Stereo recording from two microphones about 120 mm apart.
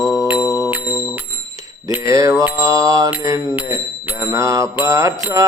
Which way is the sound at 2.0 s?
30° right (ahead or behind).